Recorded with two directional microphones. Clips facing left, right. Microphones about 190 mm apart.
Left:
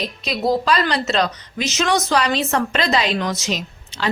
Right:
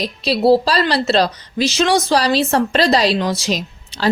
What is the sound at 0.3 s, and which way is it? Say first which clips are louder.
A woman's voice: right 6 dB; 30° right (ahead or behind).